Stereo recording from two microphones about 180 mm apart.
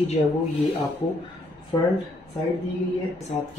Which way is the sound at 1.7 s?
30° left (ahead or behind).